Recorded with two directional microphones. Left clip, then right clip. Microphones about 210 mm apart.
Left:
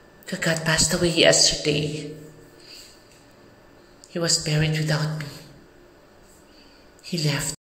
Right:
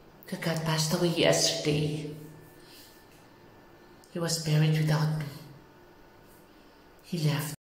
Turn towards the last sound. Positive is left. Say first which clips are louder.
# left 7 dB
turn(degrees=0)  # may be behind; listen again after turning